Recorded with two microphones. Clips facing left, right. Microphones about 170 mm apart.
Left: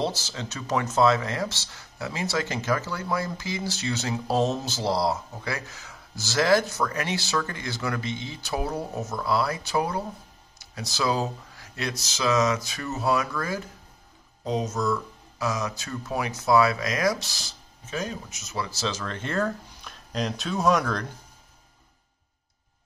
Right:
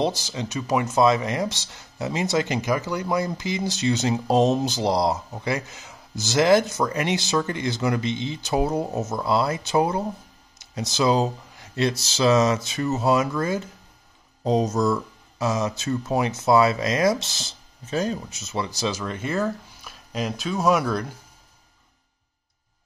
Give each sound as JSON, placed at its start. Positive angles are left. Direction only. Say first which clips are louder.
{"t": 0.0, "sound": "speech", "louder": "right 4 dB", "side_deg": -15}
{"t": 14.4, "sound": "speech", "louder": "right 6 dB", "side_deg": -35}
{"t": 15.3, "sound": "speech", "louder": "right 4 dB", "side_deg": -25}
{"t": 17.8, "sound": "speech", "louder": "right 6 dB", "side_deg": -35}